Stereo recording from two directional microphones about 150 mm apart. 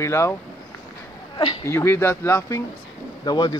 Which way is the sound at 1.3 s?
35° left (ahead or behind).